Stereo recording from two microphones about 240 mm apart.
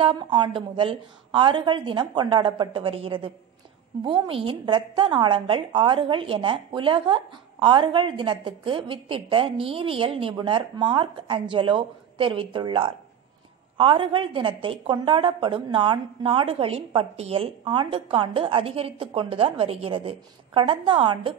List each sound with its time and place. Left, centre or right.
0.0 s a woman's voice: centre